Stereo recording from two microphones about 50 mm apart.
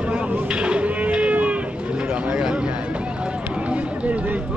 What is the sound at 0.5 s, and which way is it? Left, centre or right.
Livestock, right.